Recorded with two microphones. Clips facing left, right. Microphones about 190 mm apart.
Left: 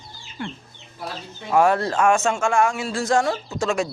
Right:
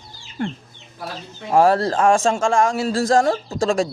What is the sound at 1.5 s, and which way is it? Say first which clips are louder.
Speech: right 3 dB; 35° right (ahead or behind).